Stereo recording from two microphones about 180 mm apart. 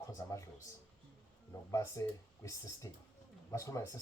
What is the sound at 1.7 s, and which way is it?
Speech, 15° left (ahead or behind).